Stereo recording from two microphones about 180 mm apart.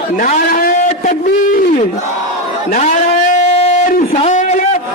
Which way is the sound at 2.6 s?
45° left (ahead or behind).